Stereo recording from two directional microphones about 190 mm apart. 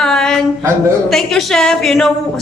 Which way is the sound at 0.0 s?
5° left (ahead or behind).